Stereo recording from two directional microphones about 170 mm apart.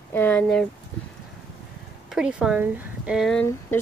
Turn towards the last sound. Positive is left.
turn(degrees=5)  # may be behind; listen again after turning